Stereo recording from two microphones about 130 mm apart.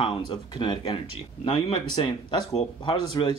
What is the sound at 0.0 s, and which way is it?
Speech, 40° left (ahead or behind).